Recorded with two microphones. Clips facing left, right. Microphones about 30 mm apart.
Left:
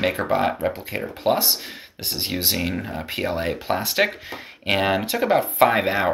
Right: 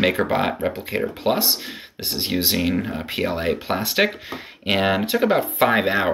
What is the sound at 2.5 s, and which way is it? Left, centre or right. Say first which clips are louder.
Speech: right 4 dB; centre.